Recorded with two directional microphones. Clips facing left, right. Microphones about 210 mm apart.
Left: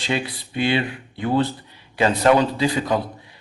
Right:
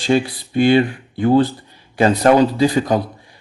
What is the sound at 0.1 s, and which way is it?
Speech, 45° right (ahead or behind).